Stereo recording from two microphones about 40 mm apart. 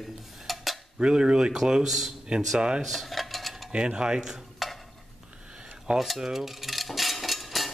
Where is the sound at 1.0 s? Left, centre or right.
Right.